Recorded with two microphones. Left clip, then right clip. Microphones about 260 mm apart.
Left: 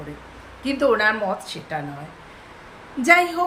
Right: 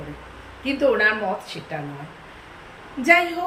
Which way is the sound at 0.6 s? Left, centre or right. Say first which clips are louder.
Even; centre.